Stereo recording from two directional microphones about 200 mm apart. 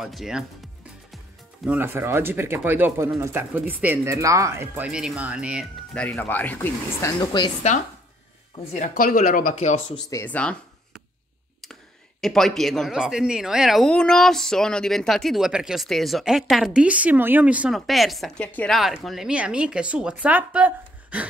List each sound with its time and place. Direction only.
0.0 s speech: centre (ahead or behind)
1.1 s music: centre (ahead or behind)
1.8 s speech: 10° right (ahead or behind)
5.9 s speech: 10° left (ahead or behind)
8.7 s speech: 40° left (ahead or behind)
10.0 s speech: 10° left (ahead or behind); by 21.3 s 5° right (ahead or behind)